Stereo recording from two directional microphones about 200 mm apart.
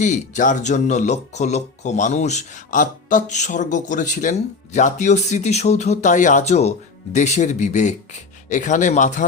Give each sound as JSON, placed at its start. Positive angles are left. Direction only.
{"t": 0.0, "sound": "speech", "side_deg": 40}